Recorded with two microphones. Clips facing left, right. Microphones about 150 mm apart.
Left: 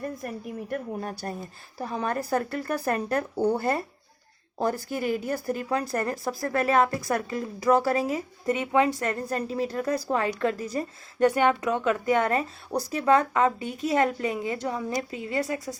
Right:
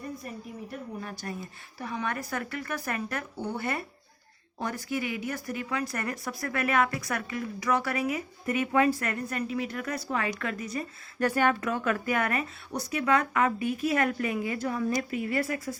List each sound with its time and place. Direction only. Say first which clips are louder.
0.0 s a woman's voice: left 5 dB; 55° left (ahead or behind)
1.8 s a woman's voice: left 4 dB; 35° left (ahead or behind)
11.3 s a woman's voice: left 2 dB; 20° left (ahead or behind)